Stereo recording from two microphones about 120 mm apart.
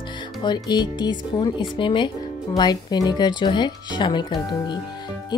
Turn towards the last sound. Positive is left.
turn(degrees=40)  # may be behind; listen again after turning